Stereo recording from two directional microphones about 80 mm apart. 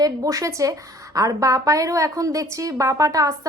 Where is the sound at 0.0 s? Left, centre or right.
Right.